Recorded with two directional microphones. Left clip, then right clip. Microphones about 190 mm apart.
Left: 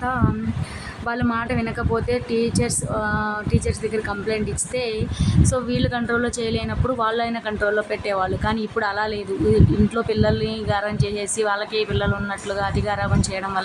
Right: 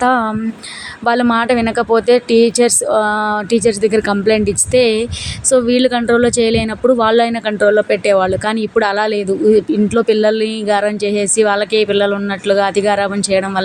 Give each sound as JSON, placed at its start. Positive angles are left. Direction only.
{"t": 0.0, "sound": "a woman's voice", "side_deg": -40}